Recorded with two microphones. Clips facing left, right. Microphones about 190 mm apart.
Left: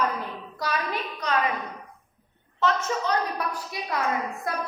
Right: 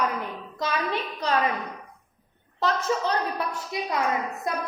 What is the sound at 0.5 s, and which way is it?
Speech, 25° right (ahead or behind).